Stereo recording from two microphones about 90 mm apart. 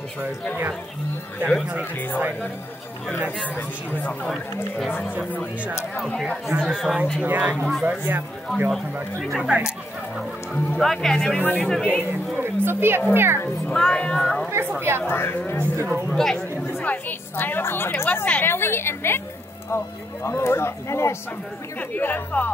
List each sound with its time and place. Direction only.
3.5 s speech: 15° left (ahead or behind)
5.9 s speech: 5° left (ahead or behind)
7.2 s speech: 20° right (ahead or behind)
8.6 s speech: centre (ahead or behind)
10.5 s speech: 20° left (ahead or behind)
10.8 s speech: 5° left (ahead or behind)
12.4 s a child's voice: 25° right (ahead or behind)
13.7 s speech: 10° left (ahead or behind)
14.8 s a child's voice: 25° right (ahead or behind)
15.0 s a woman's voice: 25° left (ahead or behind)
15.9 s speech: 5° left (ahead or behind)
16.8 s a woman's voice: 20° left (ahead or behind)
20.2 s a woman's voice: 30° left (ahead or behind)
21.7 s a woman's voice: 20° left (ahead or behind)